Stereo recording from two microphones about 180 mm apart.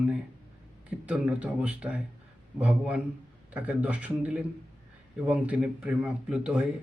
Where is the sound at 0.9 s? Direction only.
5° right (ahead or behind).